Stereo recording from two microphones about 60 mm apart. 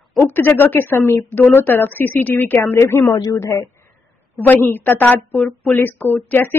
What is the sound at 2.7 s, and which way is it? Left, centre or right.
Speech, left.